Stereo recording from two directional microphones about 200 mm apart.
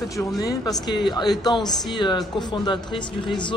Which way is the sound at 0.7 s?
20° left (ahead or behind).